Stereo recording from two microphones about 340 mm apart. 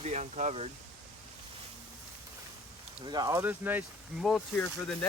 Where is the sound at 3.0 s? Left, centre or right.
Centre.